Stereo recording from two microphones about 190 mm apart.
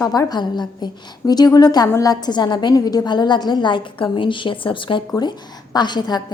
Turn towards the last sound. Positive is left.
turn(degrees=20)  # may be behind; listen again after turning